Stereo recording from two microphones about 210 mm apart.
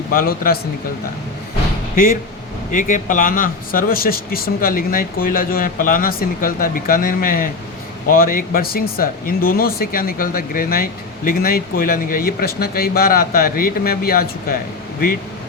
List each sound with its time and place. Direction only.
0.1 s a man's voice: 45° left (ahead or behind)
2.7 s a man's voice: 40° left (ahead or behind)